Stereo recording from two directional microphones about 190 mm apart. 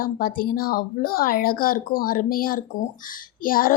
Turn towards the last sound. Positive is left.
turn(degrees=50)  # may be behind; listen again after turning